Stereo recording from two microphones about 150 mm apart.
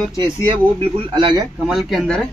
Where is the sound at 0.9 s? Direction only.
35° right (ahead or behind).